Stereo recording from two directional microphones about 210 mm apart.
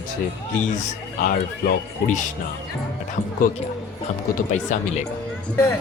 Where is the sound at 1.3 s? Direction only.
40° left (ahead or behind).